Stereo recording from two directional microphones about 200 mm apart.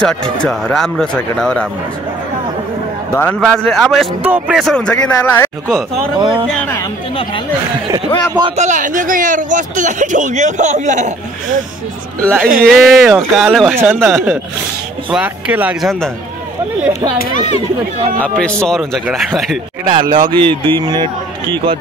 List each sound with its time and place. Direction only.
0.0 s speech: 5° left (ahead or behind)
3.1 s a man's voice: 10° left (ahead or behind)
6.1 s a man's voice: 25° right (ahead or behind)
8.4 s speech: 30° right (ahead or behind)
12.4 s speech: 45° right (ahead or behind)
12.7 s speech: centre (ahead or behind)
18.4 s speech: 5° left (ahead or behind)
19.9 s a man's voice: 25° right (ahead or behind)